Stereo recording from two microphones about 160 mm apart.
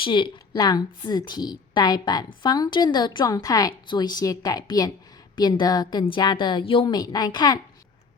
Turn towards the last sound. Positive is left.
turn(degrees=25)  # may be behind; listen again after turning